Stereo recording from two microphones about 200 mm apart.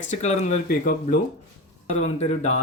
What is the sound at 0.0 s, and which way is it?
Speech, 35° left (ahead or behind).